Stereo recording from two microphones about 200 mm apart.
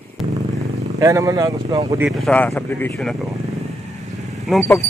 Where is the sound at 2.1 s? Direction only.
Centre (ahead or behind).